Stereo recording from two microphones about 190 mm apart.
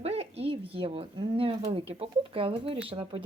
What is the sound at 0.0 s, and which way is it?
Speech, 30° right (ahead or behind).